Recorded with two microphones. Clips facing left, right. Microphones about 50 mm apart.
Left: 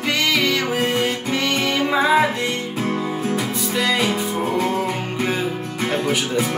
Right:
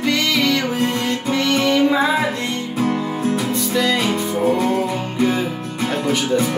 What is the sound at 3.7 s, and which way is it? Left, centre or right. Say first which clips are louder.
Speech: right 2 dB; centre.